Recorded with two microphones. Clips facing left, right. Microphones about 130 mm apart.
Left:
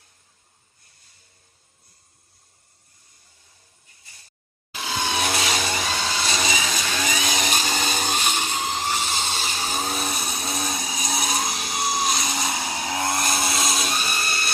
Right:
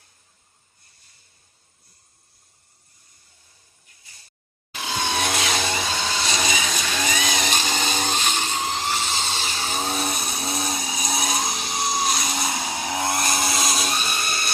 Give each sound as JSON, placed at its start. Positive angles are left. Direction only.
{"t": 4.8, "sound": "vehicle", "side_deg": 0}
{"t": 8.5, "sound": "dental drill", "side_deg": -10}
{"t": 8.8, "sound": "a sound", "side_deg": 10}
{"t": 9.5, "sound": "vehicle", "side_deg": 10}
{"t": 12.5, "sound": "vehicle", "side_deg": -15}
{"t": 13.5, "sound": "a sound", "side_deg": 0}